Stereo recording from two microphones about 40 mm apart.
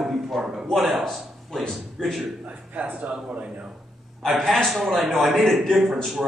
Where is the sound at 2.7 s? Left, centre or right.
Right.